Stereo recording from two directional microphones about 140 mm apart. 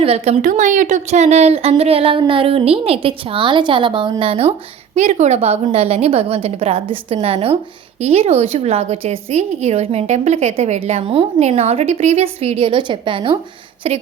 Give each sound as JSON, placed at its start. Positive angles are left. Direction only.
{"t": 0.0, "sound": "a woman's voice", "side_deg": -45}
{"t": 0.4, "sound": "a woman's voice", "side_deg": -65}
{"t": 4.9, "sound": "a woman's voice", "side_deg": -55}